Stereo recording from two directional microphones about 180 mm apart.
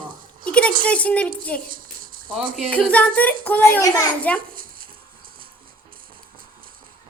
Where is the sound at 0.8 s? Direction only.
5° left (ahead or behind).